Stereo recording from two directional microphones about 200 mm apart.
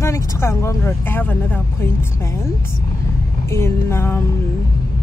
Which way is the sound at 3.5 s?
10° left (ahead or behind).